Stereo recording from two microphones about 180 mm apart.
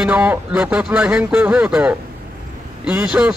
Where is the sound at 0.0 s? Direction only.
10° right (ahead or behind).